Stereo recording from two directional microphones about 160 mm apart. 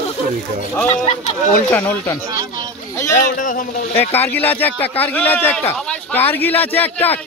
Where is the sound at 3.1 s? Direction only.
55° left (ahead or behind).